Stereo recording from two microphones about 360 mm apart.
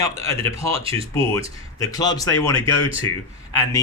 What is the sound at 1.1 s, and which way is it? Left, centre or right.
A man's voice, centre.